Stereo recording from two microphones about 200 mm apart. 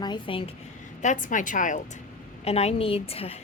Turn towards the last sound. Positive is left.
turn(degrees=30)  # may be behind; listen again after turning